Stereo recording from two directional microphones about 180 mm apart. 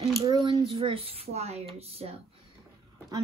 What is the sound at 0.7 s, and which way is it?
Speech, 30° right (ahead or behind).